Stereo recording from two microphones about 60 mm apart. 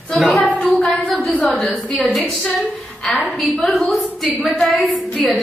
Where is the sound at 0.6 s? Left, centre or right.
Centre.